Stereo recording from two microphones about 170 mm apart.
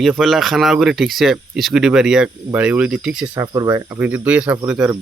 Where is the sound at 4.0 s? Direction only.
10° right (ahead or behind).